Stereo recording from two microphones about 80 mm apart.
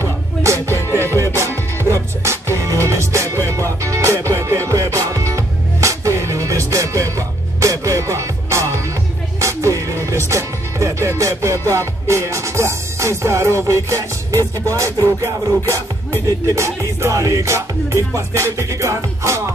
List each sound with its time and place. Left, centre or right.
0.0 s music: right
0.7 s music: left
1.1 s music: right